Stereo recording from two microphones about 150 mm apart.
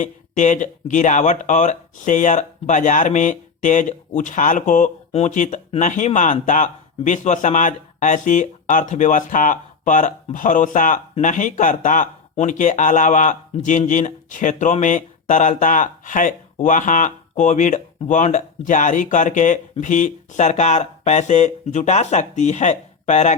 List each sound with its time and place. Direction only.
0.0 s speech: 55° left (ahead or behind)